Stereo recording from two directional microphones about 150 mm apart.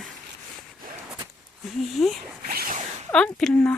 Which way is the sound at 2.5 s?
85° right.